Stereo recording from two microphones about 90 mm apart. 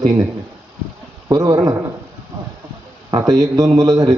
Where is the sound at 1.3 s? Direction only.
45° right (ahead or behind).